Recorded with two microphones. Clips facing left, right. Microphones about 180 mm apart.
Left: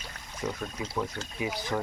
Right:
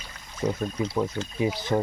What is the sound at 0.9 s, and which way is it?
Speech, 25° right (ahead or behind).